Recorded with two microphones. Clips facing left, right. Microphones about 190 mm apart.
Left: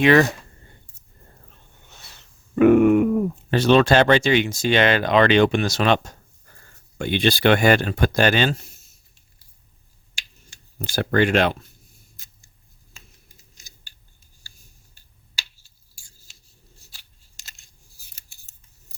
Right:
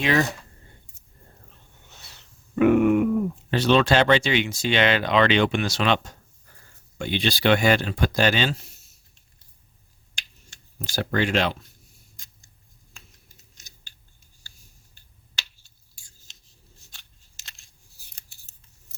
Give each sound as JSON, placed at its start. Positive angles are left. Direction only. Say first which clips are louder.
{"t": 0.0, "sound": "speech", "louder": "left 7 dB", "side_deg": 65}
{"t": 2.6, "sound": "grunt", "louder": "left 4 dB", "side_deg": 50}
{"t": 3.5, "sound": "speech", "louder": "left 4 dB", "side_deg": 45}
{"t": 10.8, "sound": "speech", "louder": "left 5 dB", "side_deg": 55}
{"t": 12.2, "sound": "a sound", "louder": "even", "side_deg": 5}
{"t": 15.4, "sound": "finger snapping", "louder": "even", "side_deg": 5}
{"t": 16.9, "sound": "scissors", "louder": "even", "side_deg": 5}